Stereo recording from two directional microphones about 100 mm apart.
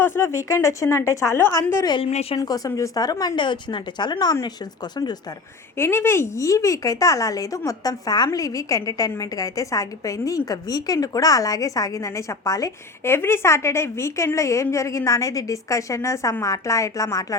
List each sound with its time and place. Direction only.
0.0 s speech: 25° left (ahead or behind)
2.0 s speech: 80° left
2.4 s speech: 35° left (ahead or behind)
5.7 s a woman's voice: 25° left (ahead or behind)
13.1 s a woman's voice: 25° left (ahead or behind)